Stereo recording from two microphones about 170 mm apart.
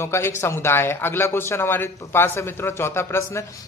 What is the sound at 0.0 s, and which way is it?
A man's voice, 15° left (ahead or behind).